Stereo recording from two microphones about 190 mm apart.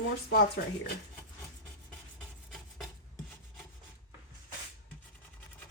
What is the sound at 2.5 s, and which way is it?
Filing, centre (ahead or behind).